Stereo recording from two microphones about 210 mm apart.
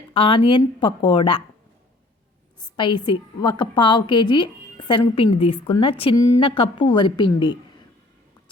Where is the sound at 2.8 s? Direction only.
25° left (ahead or behind).